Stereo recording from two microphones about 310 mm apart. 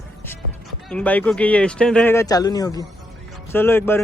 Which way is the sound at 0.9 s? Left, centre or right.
Centre.